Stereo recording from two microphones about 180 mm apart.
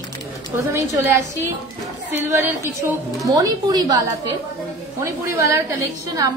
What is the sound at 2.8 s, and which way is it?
A woman's voice, 15° right (ahead or behind).